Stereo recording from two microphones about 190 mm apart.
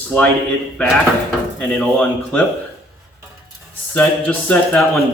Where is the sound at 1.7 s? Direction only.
5° left (ahead or behind).